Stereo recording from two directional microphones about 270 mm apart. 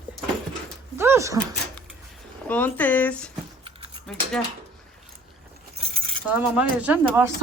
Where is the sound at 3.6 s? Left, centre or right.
Centre.